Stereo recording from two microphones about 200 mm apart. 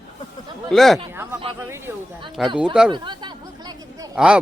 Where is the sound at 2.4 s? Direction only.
Centre (ahead or behind).